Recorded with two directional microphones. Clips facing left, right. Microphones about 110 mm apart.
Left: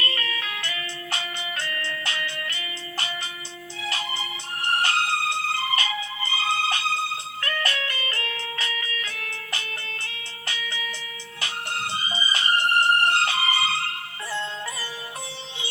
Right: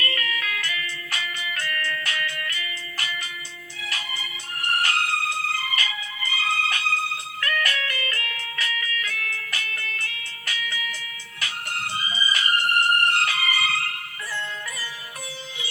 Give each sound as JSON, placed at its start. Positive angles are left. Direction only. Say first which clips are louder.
{"t": 0.0, "sound": "music", "louder": "right 1 dB", "side_deg": 25}